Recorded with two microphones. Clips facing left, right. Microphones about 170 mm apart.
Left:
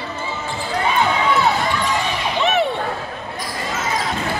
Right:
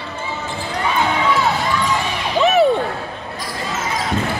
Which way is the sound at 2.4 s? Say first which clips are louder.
Right 5 dB; 40° right (ahead or behind).